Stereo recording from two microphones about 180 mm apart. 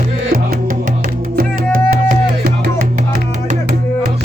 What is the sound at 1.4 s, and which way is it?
Music, 50° right (ahead or behind).